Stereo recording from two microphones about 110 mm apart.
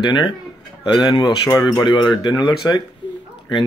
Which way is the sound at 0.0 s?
45° left (ahead or behind).